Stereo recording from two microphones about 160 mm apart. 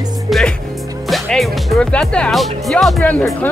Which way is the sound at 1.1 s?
Centre (ahead or behind).